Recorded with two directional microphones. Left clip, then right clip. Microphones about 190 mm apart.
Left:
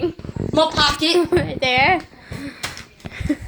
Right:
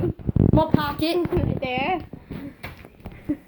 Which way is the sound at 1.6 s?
15° left (ahead or behind).